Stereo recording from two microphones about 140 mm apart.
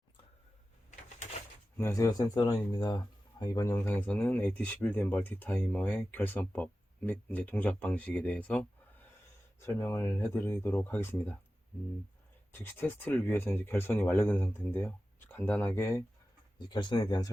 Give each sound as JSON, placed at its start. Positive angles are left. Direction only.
{"t": 1.8, "sound": "speech", "side_deg": 20}
{"t": 9.8, "sound": "speech", "side_deg": 20}
{"t": 12.5, "sound": "speech", "side_deg": 15}
{"t": 16.6, "sound": "speech", "side_deg": 30}